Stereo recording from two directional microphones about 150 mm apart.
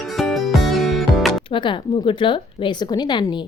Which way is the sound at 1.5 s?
35° left (ahead or behind).